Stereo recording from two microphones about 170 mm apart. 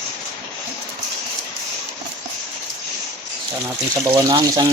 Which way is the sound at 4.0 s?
20° right (ahead or behind).